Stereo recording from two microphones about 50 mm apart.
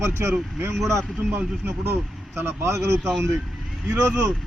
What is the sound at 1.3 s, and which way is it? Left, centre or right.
Speech, right.